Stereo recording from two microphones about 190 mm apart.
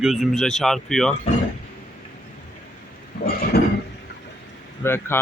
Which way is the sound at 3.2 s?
50° left (ahead or behind).